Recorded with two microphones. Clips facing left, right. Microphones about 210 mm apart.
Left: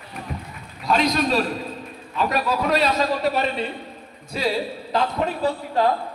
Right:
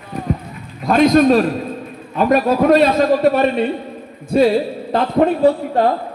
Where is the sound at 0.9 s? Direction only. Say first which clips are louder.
Right 10 dB; 50° right (ahead or behind).